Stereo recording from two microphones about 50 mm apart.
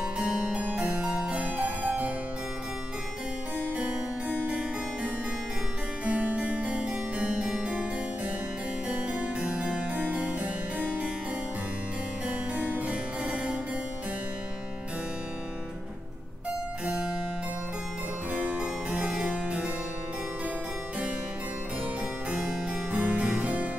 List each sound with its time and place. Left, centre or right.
0.0 s harpsichord: right
3.7 s harpsichord: right
8.8 s harpsichord: right
9.9 s harpsichord: right
12.5 s music: right
16.8 s harpsichord: centre
18.3 s harpsichord: right
18.6 s harpsichord: centre
22.8 s harpsichord: right